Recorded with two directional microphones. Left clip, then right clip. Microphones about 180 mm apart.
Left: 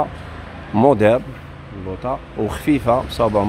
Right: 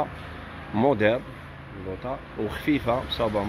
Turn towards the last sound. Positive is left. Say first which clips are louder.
# left 8 dB
turn(degrees=20)  # may be behind; listen again after turning